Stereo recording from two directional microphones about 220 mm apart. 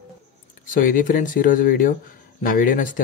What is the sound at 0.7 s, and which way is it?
Speech, 40° left (ahead or behind).